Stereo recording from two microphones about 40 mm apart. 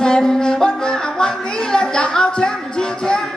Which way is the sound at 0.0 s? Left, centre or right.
Centre.